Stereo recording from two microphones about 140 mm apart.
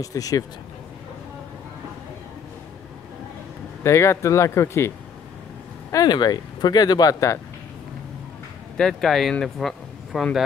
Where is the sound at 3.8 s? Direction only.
20° left (ahead or behind).